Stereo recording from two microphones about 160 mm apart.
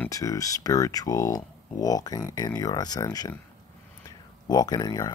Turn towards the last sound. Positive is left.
turn(degrees=25)  # may be behind; listen again after turning